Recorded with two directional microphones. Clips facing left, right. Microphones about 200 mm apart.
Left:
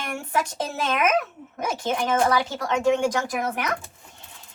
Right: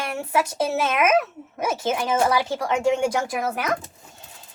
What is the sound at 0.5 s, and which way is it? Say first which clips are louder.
Speech: right 4 dB; 5° right (ahead or behind).